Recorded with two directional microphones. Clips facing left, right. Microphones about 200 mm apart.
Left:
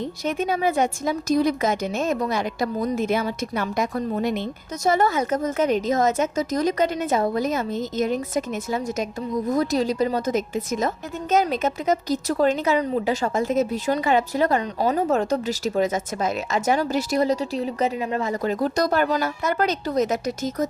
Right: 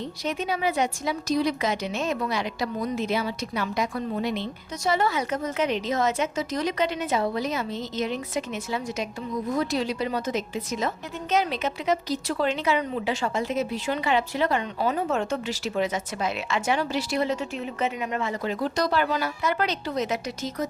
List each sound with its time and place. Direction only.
0.3 s a woman's voice: 50° left (ahead or behind)